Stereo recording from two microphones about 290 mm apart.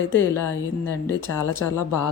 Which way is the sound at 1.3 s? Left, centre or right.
Left.